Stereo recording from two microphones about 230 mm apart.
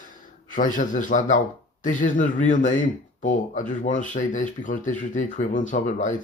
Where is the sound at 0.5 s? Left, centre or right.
Left.